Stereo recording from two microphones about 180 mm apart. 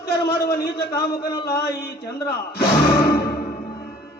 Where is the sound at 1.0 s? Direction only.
65° left (ahead or behind).